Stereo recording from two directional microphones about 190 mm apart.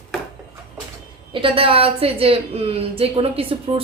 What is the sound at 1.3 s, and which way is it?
A woman's voice, 30° right (ahead or behind).